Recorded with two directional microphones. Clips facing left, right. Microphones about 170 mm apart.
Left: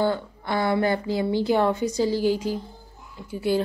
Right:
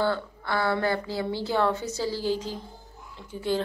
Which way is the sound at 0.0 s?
15° left (ahead or behind).